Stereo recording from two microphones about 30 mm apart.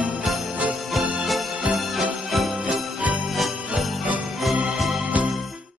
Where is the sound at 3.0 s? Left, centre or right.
Right.